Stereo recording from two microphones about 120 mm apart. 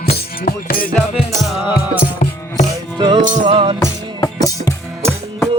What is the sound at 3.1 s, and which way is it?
Music, 90° right.